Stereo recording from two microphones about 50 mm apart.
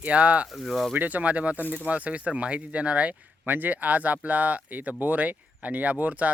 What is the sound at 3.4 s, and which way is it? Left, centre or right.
Speech, right.